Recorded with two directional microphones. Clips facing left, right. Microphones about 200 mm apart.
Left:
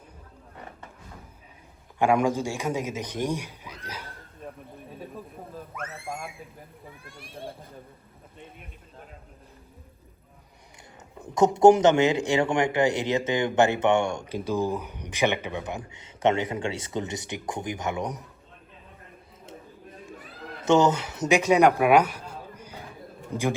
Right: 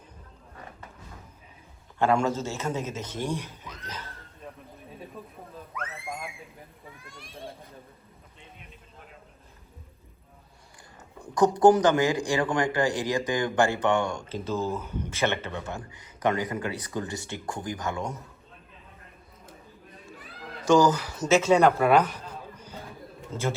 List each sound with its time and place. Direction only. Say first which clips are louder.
2.0 s a man's voice: left 2 dB; 15° left (ahead or behind)
5.9 s speech: left 1 dB; centre (ahead or behind)
7.0 s a child's voice: left 2 dB; 55° left (ahead or behind)
11.2 s speech: left 2 dB; 20° left (ahead or behind)
20.7 s a man's voice: even; 25° left (ahead or behind)